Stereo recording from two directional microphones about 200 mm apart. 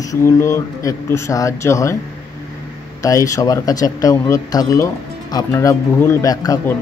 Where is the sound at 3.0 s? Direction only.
15° left (ahead or behind).